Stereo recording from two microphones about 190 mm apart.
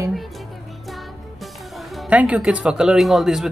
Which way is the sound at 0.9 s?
Centre (ahead or behind).